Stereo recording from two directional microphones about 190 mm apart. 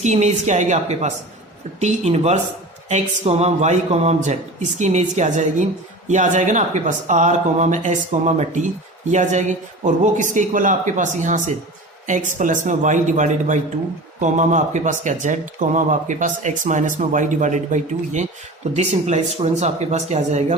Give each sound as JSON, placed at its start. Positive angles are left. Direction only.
{"t": 0.0, "sound": "speech", "side_deg": -35}